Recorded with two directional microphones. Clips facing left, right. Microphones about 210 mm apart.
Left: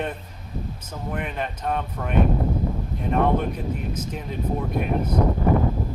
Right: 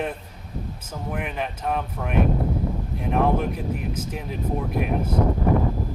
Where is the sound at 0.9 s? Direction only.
5° right (ahead or behind).